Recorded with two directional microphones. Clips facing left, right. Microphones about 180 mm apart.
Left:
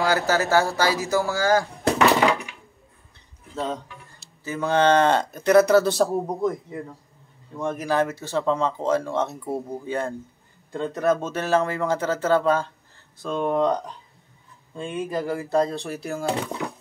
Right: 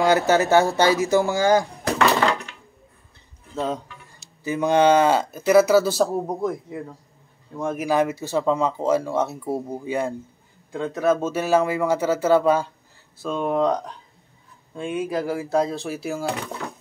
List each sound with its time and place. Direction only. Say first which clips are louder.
0.0 s speech: right 4 dB; 20° right (ahead or behind)
2.1 s a sound: left 1 dB; 10° left (ahead or behind)
3.5 s speech: right 2 dB; 10° right (ahead or behind)
14.8 s speech: right 2 dB; 5° right (ahead or behind)